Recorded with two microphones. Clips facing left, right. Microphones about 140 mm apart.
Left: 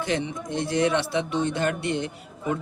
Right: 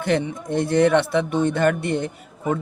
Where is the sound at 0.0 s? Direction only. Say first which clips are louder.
Right 5 dB; 55° right (ahead or behind).